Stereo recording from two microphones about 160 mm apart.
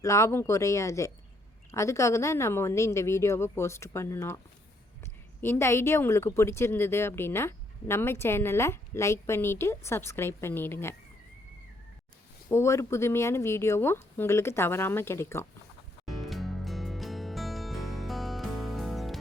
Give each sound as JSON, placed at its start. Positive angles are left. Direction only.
{"t": 0.0, "sound": "speech", "side_deg": 20}
{"t": 5.4, "sound": "speech", "side_deg": 15}
{"t": 12.5, "sound": "speech", "side_deg": 15}
{"t": 16.0, "sound": "music", "side_deg": 0}